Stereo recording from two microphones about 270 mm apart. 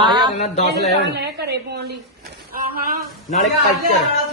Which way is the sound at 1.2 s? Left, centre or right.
Right.